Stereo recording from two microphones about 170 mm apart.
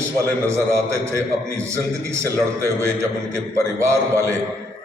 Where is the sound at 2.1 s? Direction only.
15° right (ahead or behind).